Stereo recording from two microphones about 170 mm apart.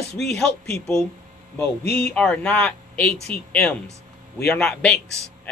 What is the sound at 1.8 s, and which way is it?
Speech, 70° left (ahead or behind).